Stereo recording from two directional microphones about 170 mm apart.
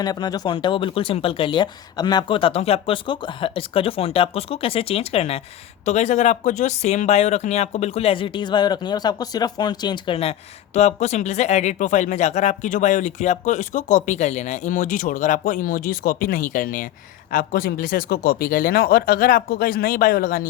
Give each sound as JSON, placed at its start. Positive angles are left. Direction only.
{"t": 0.0, "sound": "speech", "side_deg": 25}